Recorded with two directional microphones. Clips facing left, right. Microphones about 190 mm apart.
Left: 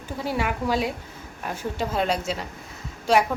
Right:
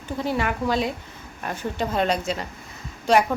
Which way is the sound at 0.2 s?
5° left (ahead or behind).